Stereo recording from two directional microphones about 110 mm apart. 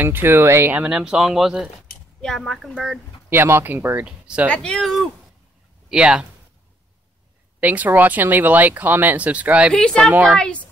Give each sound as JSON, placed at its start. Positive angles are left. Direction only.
{"t": 0.0, "sound": "speech", "side_deg": -20}
{"t": 0.8, "sound": "speech", "side_deg": -10}
{"t": 3.3, "sound": "speech", "side_deg": -20}
{"t": 4.5, "sound": "speech", "side_deg": 10}
{"t": 5.9, "sound": "speech", "side_deg": -10}
{"t": 7.6, "sound": "speech", "side_deg": -15}
{"t": 9.8, "sound": "a woman's voice", "side_deg": 5}